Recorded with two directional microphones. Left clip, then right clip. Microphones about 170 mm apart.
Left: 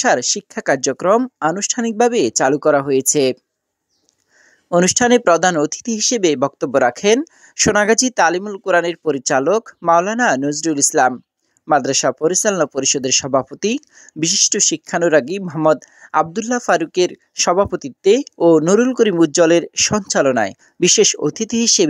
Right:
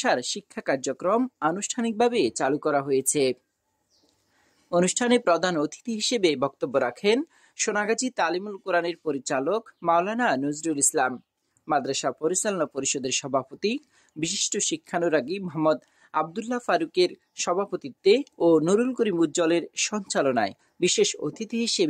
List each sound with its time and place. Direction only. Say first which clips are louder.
0.0 s speech: left 9 dB; 35° left (ahead or behind)
4.6 s speech: left 9 dB; 40° left (ahead or behind)